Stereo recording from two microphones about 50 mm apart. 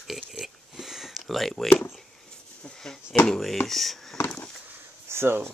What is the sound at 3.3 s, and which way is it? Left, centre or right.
Speech, centre.